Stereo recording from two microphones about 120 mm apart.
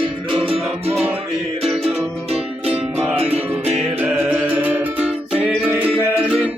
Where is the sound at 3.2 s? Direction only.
55° right (ahead or behind).